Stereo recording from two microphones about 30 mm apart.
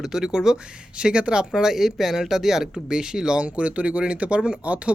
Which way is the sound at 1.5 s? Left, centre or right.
Right.